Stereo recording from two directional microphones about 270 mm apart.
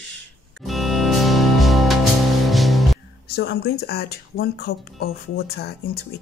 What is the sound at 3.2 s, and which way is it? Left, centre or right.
Speech, left.